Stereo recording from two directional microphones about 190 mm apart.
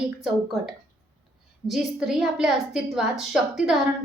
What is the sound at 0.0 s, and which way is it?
A woman's voice, 5° right (ahead or behind).